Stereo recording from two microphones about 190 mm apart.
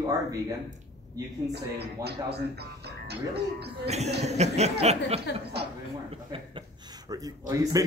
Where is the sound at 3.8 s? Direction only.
35° right (ahead or behind).